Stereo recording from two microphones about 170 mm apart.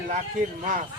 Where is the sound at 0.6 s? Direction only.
50° right (ahead or behind).